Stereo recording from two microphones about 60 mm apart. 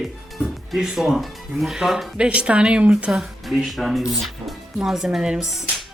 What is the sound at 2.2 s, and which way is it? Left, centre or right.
Speech, centre.